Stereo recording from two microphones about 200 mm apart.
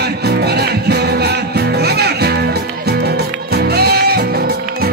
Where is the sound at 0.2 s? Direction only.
55° right (ahead or behind).